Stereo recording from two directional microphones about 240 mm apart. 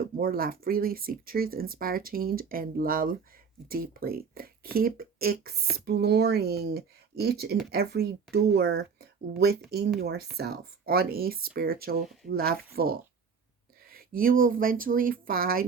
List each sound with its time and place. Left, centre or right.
0.0 s speech: right